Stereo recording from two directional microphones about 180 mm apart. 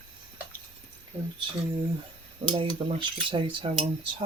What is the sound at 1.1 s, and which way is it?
Speech, 10° right (ahead or behind).